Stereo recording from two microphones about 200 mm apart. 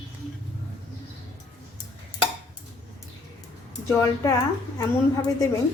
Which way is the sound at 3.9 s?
15° left (ahead or behind).